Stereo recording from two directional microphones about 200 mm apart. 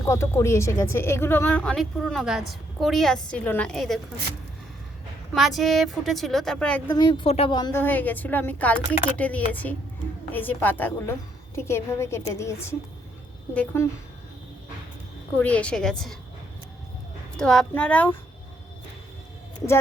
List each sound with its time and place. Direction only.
0.0 s speech: 15° left (ahead or behind)
5.3 s speech: centre (ahead or behind)
6.9 s a woman's voice: 25° left (ahead or behind)
7.8 s a woman's voice: 10° left (ahead or behind)
15.4 s speech: 5° left (ahead or behind)
17.3 s a woman's voice: 5° left (ahead or behind)